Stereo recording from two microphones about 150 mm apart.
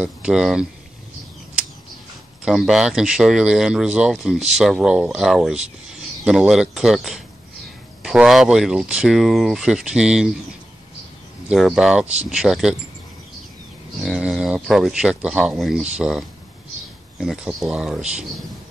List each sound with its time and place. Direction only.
0.0 s speech: 5° right (ahead or behind)
2.4 s speech: centre (ahead or behind)
11.4 s speech: 5° right (ahead or behind)
14.0 s speech: 5° right (ahead or behind)